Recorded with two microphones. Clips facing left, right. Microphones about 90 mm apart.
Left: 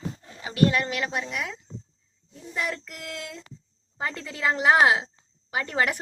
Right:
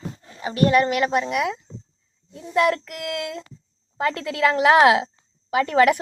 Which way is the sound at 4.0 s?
90° right.